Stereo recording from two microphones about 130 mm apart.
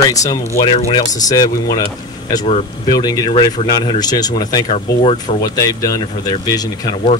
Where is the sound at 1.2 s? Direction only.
30° left (ahead or behind).